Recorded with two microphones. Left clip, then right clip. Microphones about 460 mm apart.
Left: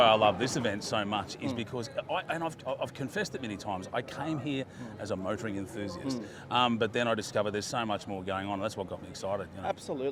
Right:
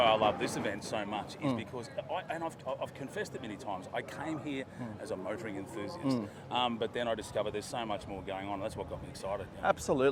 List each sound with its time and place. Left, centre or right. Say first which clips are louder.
0.0 s speech: left 4 dB; left
9.6 s speech: right 7 dB; right